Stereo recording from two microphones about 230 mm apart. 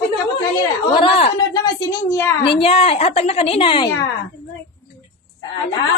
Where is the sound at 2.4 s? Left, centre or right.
Left.